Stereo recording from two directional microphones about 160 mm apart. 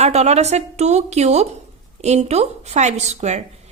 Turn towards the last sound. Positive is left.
turn(degrees=-45)  # may be behind; listen again after turning